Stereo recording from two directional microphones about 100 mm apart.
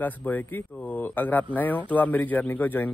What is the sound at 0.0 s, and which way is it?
Speech, 15° left (ahead or behind).